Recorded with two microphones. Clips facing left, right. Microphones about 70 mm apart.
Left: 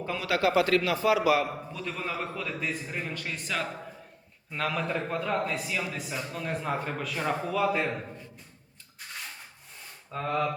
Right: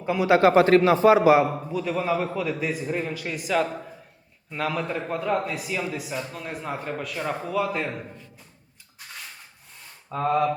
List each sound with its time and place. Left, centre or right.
0.0 s a man's voice: centre
0.4 s a man's voice: right
1.7 s a man's voice: centre